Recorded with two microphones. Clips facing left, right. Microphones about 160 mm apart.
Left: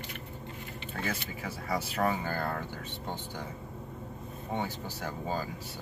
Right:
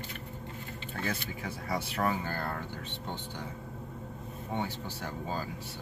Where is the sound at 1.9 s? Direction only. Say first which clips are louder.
Left 2 dB; 45° left (ahead or behind).